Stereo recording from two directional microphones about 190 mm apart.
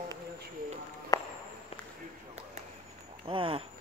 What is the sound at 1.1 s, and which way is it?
Walk, 15° left (ahead or behind).